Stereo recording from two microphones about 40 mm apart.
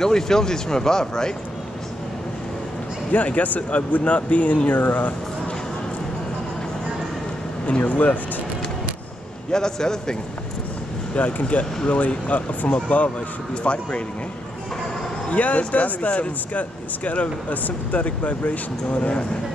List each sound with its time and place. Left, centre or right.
0.0 s speech: centre
3.1 s speech: left
7.6 s speech: left
9.5 s speech: centre
11.1 s speech: left
15.2 s speech: left